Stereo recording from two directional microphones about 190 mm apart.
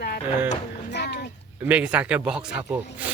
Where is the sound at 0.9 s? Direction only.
60° left (ahead or behind).